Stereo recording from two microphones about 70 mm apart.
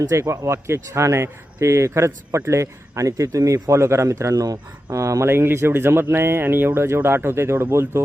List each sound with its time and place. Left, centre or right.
0.1 s speech: right
5.3 s speech: right